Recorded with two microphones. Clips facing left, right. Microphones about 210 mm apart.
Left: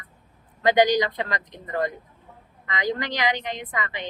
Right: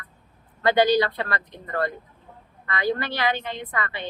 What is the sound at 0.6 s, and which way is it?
A woman's voice, 15° left (ahead or behind).